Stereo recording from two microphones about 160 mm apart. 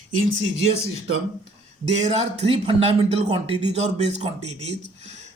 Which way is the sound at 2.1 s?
40° right (ahead or behind).